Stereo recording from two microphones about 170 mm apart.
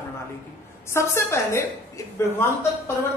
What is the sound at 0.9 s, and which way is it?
Speech, 15° left (ahead or behind).